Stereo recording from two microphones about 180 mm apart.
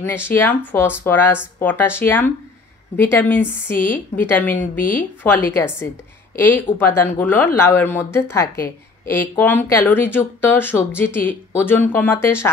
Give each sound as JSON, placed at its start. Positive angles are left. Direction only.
{"t": 0.0, "sound": "speech", "side_deg": 10}
{"t": 4.6, "sound": "a woman's voice", "side_deg": 50}
{"t": 5.2, "sound": "speech", "side_deg": 10}